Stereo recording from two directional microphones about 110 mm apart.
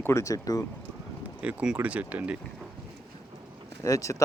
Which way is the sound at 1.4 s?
10° right (ahead or behind).